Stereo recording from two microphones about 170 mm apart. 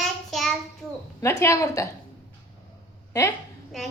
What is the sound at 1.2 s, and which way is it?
Speech, 15° left (ahead or behind).